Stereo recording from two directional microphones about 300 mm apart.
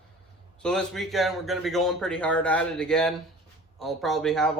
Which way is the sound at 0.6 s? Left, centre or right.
Centre.